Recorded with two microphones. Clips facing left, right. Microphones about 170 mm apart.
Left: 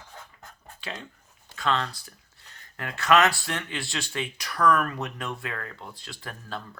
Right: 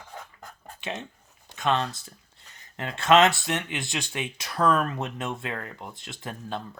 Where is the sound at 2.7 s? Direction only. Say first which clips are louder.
Right 2 dB; 25° right (ahead or behind).